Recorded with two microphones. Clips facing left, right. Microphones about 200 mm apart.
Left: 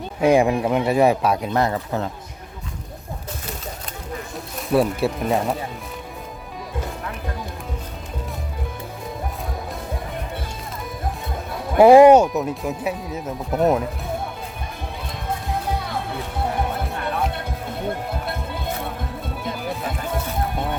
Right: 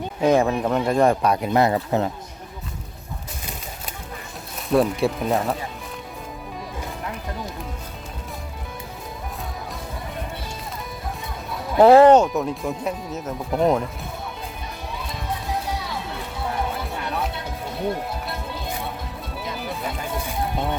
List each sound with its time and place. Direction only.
0.2 s speech: 10° left (ahead or behind)
1.5 s speech: 15° right (ahead or behind)
4.5 s speech: 5° left (ahead or behind)
11.8 s speech: 10° left (ahead or behind)
15.6 s music: 55° left (ahead or behind)
16.8 s music: centre (ahead or behind)